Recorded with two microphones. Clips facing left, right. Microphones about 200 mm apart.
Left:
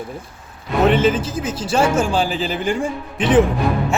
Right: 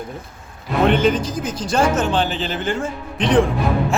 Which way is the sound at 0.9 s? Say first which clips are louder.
Left 1 dB; 5° left (ahead or behind).